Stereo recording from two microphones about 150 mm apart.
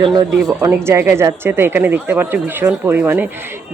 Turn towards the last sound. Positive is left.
turn(degrees=-10)  # may be behind; listen again after turning